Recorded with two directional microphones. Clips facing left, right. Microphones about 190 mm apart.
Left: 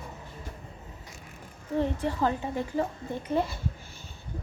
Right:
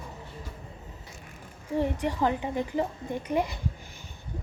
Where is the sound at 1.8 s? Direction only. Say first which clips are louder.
Even; 15° right (ahead or behind).